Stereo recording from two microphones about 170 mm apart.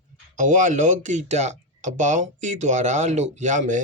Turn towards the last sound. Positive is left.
turn(degrees=-45)  # may be behind; listen again after turning